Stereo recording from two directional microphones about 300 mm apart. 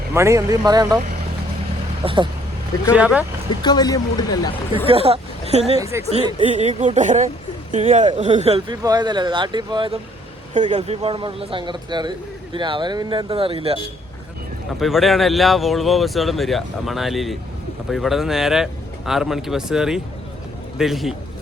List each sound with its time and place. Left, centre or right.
0.1 s speech: centre
2.0 s speech: centre
2.9 s a man's voice: centre
3.6 s speech: centre
4.9 s speech: centre
5.8 s speech: centre
6.1 s speech: right
14.8 s a man's voice: centre